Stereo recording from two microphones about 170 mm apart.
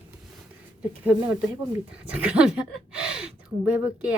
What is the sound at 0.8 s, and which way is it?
Speech, 5° right (ahead or behind).